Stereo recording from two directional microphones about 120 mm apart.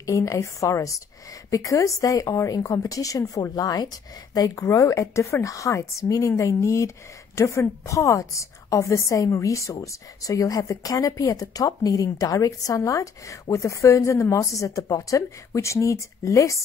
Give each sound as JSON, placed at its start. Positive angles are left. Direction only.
{"t": 0.0, "sound": "a woman's voice", "side_deg": 25}